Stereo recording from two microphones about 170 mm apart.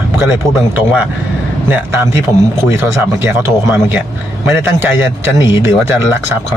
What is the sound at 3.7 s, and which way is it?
Speech, 10° right (ahead or behind).